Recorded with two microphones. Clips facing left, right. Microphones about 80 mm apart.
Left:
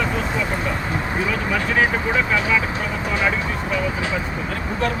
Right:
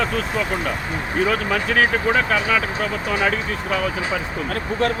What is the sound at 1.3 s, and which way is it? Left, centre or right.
Speech, right.